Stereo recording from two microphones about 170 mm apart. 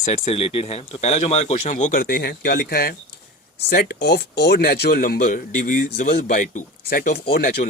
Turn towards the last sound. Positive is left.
turn(degrees=65)  # may be behind; listen again after turning